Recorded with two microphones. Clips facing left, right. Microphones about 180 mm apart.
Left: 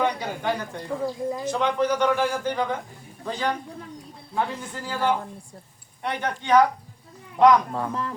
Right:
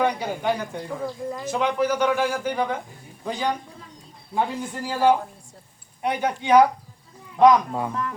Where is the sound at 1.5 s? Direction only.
10° right (ahead or behind).